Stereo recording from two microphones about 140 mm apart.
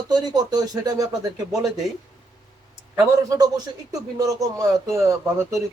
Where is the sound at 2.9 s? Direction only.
25° right (ahead or behind).